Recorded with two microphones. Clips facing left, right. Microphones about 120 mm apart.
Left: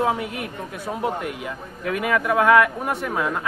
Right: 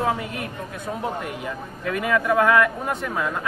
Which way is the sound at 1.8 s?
15° left (ahead or behind).